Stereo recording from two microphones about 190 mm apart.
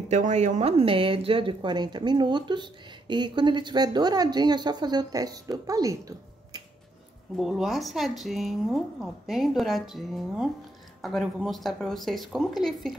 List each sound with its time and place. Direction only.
0.1 s speech: 40° right (ahead or behind); by 6.6 s 20° right (ahead or behind)
7.3 s speech: centre (ahead or behind)